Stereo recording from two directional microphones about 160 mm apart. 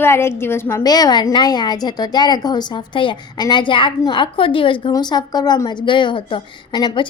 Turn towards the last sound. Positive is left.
turn(degrees=30)  # may be behind; listen again after turning